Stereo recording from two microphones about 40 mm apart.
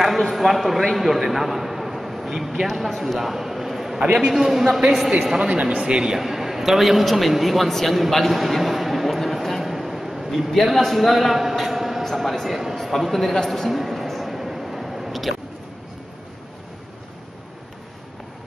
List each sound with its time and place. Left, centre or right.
0.0 s a man's voice: centre
3.2 s a sound: centre
4.3 s a man's voice: centre
5.5 s speech: right
5.8 s speech: right
6.1 s a man's voice: centre
8.1 s a sound: centre
10.5 s a man's voice: centre
12.7 s a sound: centre